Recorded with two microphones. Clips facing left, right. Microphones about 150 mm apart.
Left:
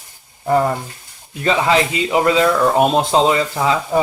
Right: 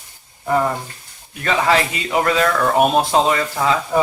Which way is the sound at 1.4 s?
20° left (ahead or behind).